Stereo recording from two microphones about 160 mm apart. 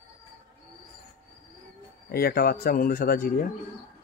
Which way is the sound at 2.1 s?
70° left (ahead or behind).